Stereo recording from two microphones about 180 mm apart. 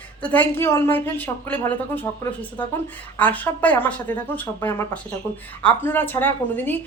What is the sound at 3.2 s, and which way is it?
Speech, 10° left (ahead or behind).